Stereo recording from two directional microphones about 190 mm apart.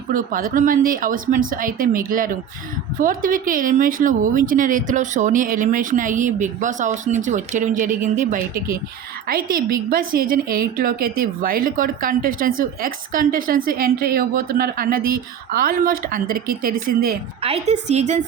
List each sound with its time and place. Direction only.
0.1 s speech: 45° right (ahead or behind)
17.4 s a woman's voice: 35° right (ahead or behind)